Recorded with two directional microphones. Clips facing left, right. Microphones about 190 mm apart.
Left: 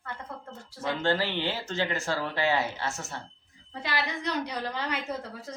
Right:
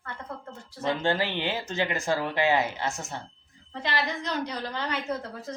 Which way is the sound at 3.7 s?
10° left (ahead or behind).